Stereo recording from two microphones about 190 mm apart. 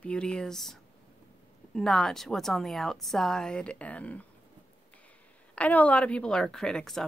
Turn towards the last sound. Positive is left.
turn(degrees=0)  # may be behind; listen again after turning